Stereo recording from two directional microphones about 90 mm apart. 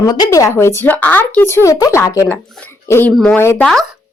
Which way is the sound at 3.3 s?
30° left (ahead or behind).